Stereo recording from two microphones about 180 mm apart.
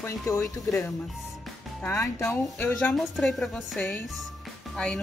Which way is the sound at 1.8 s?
15° left (ahead or behind).